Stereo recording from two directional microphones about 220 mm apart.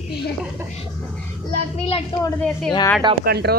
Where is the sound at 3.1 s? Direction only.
45° right (ahead or behind).